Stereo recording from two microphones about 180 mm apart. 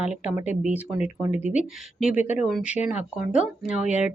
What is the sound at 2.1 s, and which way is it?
Speech, 40° left (ahead or behind).